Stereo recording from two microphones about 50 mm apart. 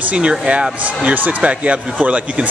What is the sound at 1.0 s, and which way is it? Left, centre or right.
Speech, right.